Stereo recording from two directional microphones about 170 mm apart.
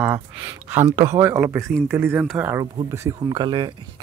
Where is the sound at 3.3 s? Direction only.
30° right (ahead or behind).